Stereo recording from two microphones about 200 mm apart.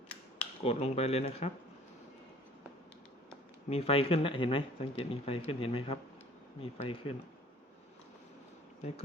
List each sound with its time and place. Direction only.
0.6 s speech: 30° left (ahead or behind)
3.7 s speech: 30° left (ahead or behind)